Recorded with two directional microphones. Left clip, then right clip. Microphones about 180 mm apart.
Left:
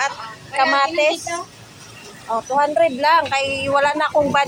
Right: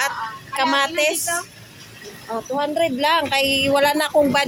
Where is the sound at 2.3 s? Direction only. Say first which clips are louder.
Left 5 dB; 30° right (ahead or behind).